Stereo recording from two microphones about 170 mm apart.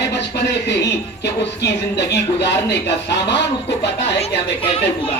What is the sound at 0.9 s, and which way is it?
Speech, 80° left.